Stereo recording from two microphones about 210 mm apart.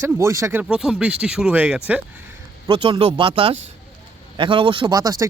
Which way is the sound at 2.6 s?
20° right (ahead or behind).